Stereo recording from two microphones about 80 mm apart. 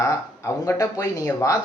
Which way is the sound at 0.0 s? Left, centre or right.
Left.